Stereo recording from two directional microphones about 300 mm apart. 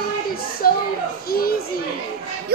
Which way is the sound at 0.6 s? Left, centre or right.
Left.